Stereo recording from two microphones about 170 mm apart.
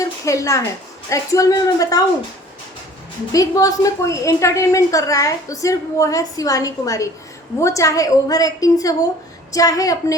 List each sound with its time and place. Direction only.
0.0 s a woman's voice: 20° left (ahead or behind)
3.3 s a woman's voice: 20° left (ahead or behind)